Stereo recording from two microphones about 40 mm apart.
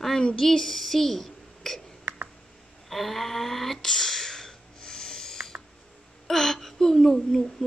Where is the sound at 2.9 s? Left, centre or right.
Centre.